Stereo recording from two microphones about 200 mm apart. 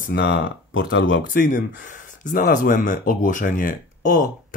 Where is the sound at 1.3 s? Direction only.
40° left (ahead or behind).